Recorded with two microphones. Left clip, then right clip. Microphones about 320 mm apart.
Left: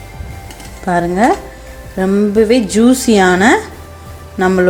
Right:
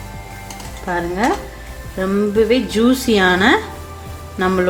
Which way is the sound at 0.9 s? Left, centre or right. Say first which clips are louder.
Left 6 dB; centre.